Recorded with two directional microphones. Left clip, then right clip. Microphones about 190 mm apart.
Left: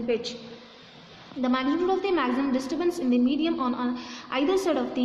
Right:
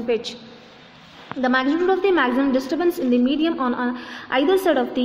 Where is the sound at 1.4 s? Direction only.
20° right (ahead or behind).